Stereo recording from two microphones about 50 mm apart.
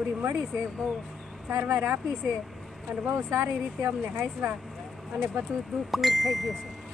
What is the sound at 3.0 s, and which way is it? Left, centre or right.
Speech, right.